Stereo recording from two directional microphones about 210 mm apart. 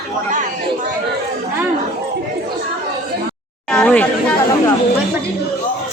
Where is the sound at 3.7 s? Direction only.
5° left (ahead or behind).